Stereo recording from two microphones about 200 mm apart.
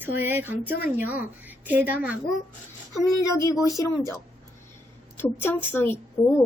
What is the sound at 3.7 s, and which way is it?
A woman's voice, 15° left (ahead or behind).